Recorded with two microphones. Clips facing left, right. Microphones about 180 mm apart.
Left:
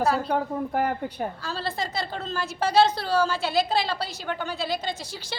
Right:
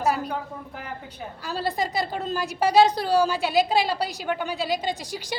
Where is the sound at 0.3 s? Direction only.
55° left (ahead or behind).